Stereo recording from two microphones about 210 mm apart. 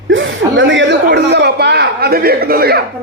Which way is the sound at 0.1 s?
65° right (ahead or behind).